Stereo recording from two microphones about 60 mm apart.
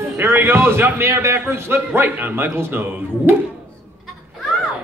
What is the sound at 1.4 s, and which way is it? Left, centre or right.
A man's voice, right.